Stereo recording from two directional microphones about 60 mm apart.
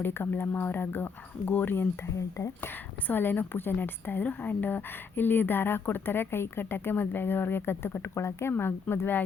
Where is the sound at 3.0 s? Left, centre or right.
Left.